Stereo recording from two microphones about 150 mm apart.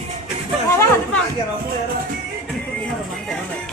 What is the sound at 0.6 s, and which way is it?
Speech, 20° left (ahead or behind).